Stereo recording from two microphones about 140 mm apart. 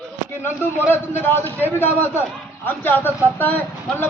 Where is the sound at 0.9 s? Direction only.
15° left (ahead or behind).